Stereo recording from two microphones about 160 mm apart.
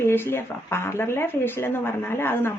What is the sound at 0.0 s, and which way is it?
Speech, 15° left (ahead or behind).